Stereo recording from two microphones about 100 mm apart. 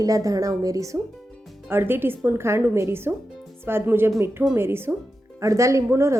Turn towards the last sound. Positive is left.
turn(degrees=-25)  # may be behind; listen again after turning